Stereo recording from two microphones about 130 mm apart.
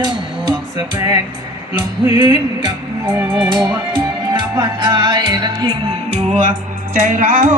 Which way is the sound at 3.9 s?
35° right (ahead or behind).